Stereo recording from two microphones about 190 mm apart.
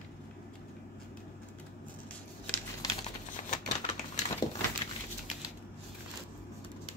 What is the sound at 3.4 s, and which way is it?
Typewriter, 40° left (ahead or behind).